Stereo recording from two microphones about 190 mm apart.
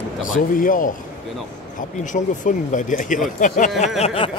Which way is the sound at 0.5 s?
45° left (ahead or behind).